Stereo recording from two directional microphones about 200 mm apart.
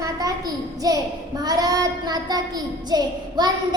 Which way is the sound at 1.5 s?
20° right (ahead or behind).